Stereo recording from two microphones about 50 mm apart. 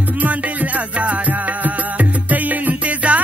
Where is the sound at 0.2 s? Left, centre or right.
Right.